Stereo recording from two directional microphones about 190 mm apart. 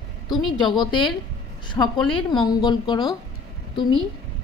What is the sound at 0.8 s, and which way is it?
A woman's voice, 25° left (ahead or behind).